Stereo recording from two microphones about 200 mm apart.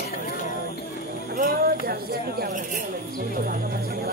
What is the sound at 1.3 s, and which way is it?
Speech, 45° right (ahead or behind).